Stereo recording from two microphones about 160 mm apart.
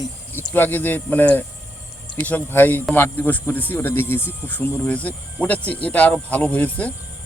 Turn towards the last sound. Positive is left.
turn(degrees=10)  # may be behind; listen again after turning